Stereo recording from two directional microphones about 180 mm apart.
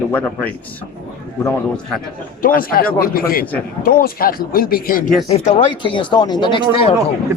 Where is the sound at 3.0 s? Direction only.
55° left (ahead or behind).